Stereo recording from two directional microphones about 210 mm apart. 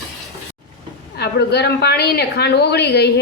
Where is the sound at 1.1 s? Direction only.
50° left (ahead or behind).